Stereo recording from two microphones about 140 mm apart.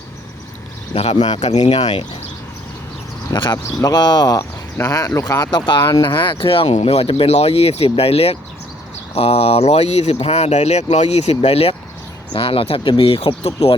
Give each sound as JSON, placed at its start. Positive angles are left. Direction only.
{"t": 0.9, "sound": "speech", "side_deg": 45}
{"t": 3.3, "sound": "speech", "side_deg": 30}